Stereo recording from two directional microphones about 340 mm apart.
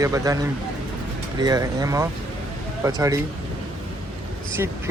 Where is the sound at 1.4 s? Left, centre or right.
Centre.